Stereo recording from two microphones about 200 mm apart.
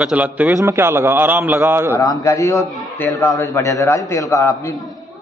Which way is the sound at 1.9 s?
15° left (ahead or behind).